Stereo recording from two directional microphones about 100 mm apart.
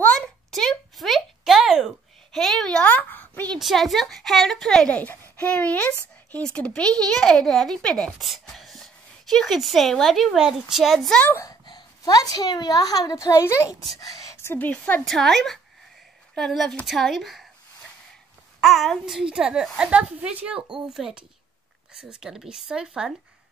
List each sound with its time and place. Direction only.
0.5 s a sound: 5° left (ahead or behind)
3.5 s a child's voice: centre (ahead or behind)
11.6 s a woman's voice: 45° left (ahead or behind); by 15.0 s 15° left (ahead or behind)
15.0 s a child's voice: 5° left (ahead or behind)
18.6 s a child's voice: centre (ahead or behind)